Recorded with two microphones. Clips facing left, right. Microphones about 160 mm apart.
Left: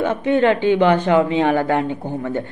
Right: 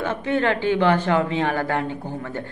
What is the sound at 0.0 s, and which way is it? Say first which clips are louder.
Speech: left 6 dB; 20° left (ahead or behind).